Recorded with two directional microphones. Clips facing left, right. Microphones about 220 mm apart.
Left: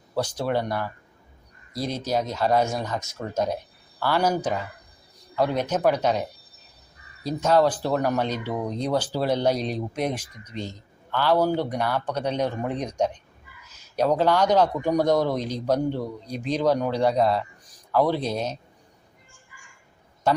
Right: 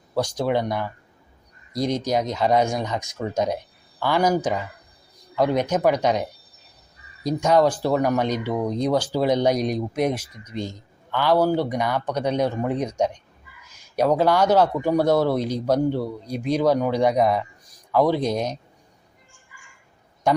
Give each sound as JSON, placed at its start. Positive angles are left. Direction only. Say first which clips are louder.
{"t": 0.2, "sound": "a man's voice", "louder": "right 3 dB", "side_deg": -15}
{"t": 7.3, "sound": "a man's voice", "louder": "right 2 dB", "side_deg": -15}
{"t": 20.3, "sound": "a man's voice", "louder": "right 2 dB", "side_deg": -15}